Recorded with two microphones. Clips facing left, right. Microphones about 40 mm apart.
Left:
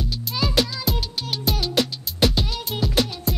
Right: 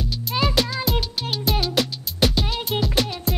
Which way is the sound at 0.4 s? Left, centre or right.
Right.